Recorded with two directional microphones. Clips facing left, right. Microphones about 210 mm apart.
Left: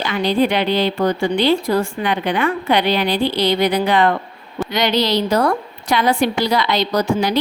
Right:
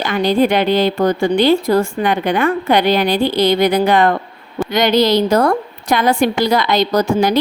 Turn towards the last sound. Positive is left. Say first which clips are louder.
# right 3 dB
turn(degrees=-50)  # may be behind; listen again after turning